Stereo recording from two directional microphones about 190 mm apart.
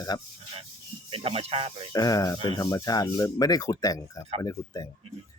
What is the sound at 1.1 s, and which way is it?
Speech, 30° right (ahead or behind).